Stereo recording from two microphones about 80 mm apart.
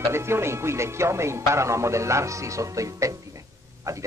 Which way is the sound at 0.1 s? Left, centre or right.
Right.